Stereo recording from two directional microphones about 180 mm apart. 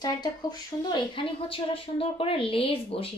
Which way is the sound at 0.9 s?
30° left (ahead or behind).